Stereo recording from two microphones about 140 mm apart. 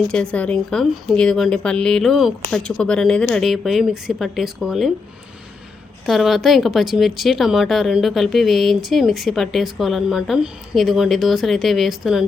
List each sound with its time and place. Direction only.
0.1 s speech: 5° left (ahead or behind)
6.1 s speech: centre (ahead or behind)